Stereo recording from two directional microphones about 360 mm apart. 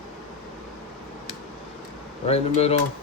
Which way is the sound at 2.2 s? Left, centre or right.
Centre.